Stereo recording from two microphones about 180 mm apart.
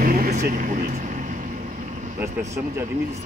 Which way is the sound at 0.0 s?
55° right (ahead or behind).